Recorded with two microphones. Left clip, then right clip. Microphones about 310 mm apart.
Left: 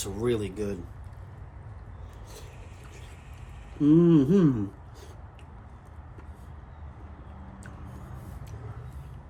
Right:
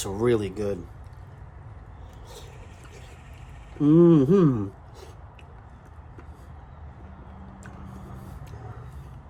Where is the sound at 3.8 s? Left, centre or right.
Right.